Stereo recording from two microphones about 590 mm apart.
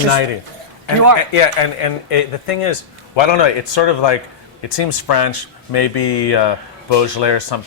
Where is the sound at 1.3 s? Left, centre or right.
Left.